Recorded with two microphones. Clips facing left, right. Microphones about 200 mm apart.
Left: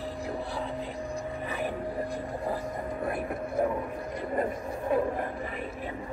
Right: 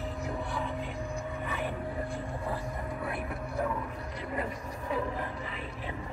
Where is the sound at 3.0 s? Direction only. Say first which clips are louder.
Left 4 dB; 45° left (ahead or behind).